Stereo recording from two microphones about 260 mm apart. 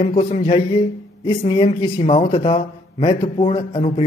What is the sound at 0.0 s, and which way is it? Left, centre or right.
Speech, left.